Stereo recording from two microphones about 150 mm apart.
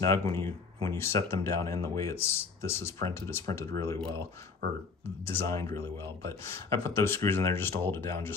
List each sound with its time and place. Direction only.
0.0 s speech: 20° left (ahead or behind)
4.0 s speech: 35° right (ahead or behind)
5.0 s speech: 15° left (ahead or behind)